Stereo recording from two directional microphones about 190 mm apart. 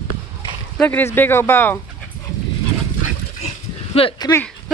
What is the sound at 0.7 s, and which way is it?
Speech, 10° left (ahead or behind).